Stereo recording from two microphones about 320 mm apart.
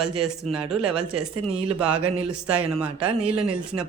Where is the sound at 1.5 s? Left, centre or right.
Centre.